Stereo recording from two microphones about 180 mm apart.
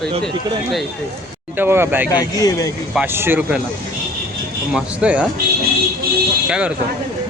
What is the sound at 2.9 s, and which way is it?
Speech, 10° right (ahead or behind).